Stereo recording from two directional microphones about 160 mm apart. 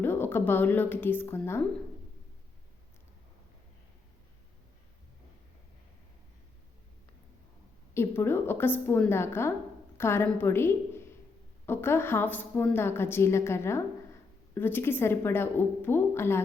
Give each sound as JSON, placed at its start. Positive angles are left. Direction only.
{"t": 0.0, "sound": "a woman's voice", "side_deg": 15}
{"t": 7.9, "sound": "a woman's voice", "side_deg": 15}